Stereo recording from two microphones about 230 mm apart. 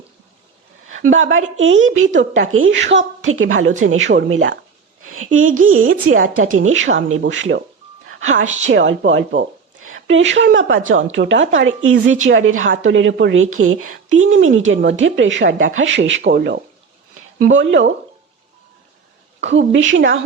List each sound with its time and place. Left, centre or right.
1.1 s a woman's voice: right
5.0 s a sound: right
5.5 s a woman's voice: right
8.4 s a woman's voice: right
8.7 s a woman's voice: right
19.4 s a woman's voice: right